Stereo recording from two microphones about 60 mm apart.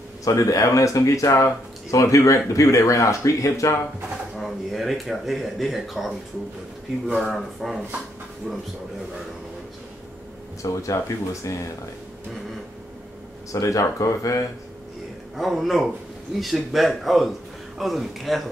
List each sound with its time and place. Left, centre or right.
0.2 s speech: left
4.4 s a man's voice: centre
7.2 s a man's voice: centre
10.6 s speech: left
13.5 s speech: left
15.3 s a man's voice: centre